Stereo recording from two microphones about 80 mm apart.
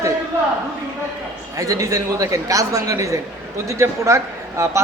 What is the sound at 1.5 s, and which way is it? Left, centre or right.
A woman's voice, right.